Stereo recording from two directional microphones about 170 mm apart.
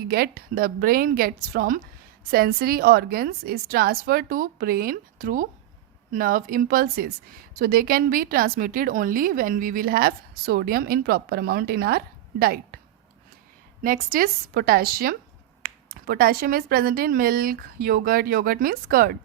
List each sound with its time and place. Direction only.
0.1 s a woman's voice: 65° right (ahead or behind)
13.8 s a woman's voice: 55° right (ahead or behind)